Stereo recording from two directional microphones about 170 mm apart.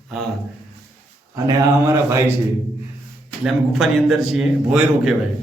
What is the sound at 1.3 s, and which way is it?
Speech, 20° right (ahead or behind).